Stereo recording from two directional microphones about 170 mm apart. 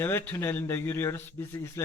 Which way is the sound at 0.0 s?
15° left (ahead or behind).